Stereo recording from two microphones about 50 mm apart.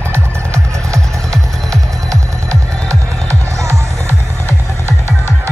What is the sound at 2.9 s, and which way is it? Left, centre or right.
Music, right.